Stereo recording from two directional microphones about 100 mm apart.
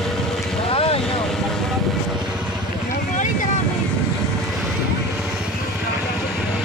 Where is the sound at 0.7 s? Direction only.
70° left (ahead or behind).